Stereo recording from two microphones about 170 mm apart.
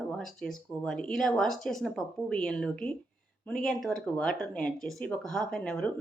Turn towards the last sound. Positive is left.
turn(degrees=5)  # may be behind; listen again after turning